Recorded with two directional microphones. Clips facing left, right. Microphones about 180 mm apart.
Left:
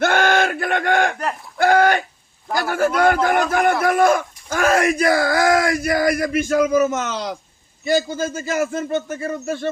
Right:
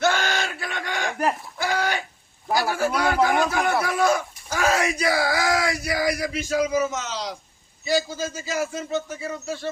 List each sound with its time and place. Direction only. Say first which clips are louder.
0.0 s a sound: left 6 dB; 55° left (ahead or behind)
1.5 s livestock: left 10 dB; 55° left (ahead or behind)
2.6 s a man's voice: left 5 dB; 50° left (ahead or behind)